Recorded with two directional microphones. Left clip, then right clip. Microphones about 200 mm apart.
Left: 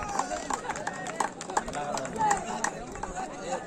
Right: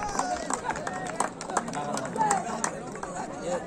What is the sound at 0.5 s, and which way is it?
Run, 40° right (ahead or behind).